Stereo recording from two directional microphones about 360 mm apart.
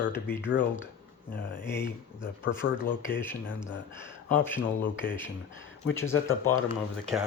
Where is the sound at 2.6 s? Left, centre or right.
Left.